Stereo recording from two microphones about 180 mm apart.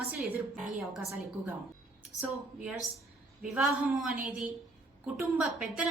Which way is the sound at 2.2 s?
10° right (ahead or behind).